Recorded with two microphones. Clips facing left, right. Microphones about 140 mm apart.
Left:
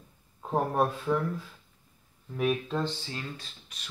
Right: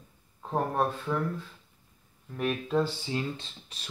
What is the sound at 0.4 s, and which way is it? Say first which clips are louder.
Speech: left 1 dB; 10° left (ahead or behind).